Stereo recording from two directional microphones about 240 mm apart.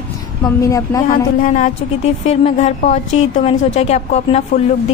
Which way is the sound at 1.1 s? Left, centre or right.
Left.